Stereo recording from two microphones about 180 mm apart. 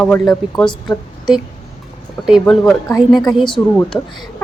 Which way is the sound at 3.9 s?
15° left (ahead or behind).